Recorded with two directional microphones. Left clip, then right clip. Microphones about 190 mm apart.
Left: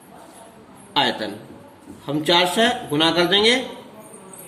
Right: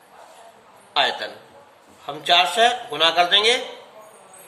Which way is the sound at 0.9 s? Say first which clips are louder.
Even; 15° left (ahead or behind).